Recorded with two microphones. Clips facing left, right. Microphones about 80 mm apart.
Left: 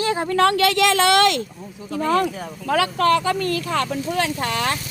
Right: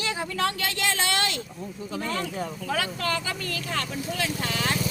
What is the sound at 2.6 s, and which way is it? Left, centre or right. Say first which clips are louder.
Speech: left 12 dB; left.